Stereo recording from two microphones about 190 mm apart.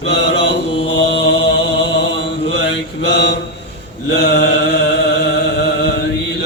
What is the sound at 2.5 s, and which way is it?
Mantra, 65° left (ahead or behind).